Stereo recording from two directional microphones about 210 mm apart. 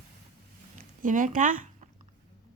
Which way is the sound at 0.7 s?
40° right (ahead or behind).